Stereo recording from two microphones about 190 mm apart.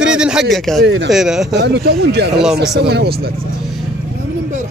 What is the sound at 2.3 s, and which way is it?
Speech, centre (ahead or behind).